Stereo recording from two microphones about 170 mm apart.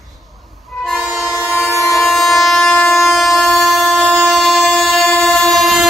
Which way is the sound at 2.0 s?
Centre (ahead or behind).